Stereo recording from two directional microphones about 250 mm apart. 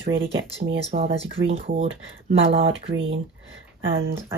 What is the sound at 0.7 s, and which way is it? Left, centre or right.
Speech, right.